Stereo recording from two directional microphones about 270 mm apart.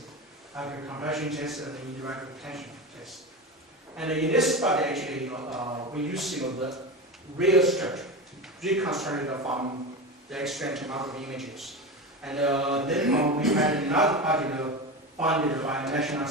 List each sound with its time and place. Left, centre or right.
0.5 s a man's voice: centre
9.4 s a man's voice: centre
10.3 s a man's voice: centre